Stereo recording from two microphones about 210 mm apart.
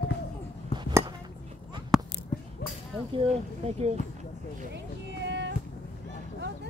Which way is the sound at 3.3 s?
30° right (ahead or behind).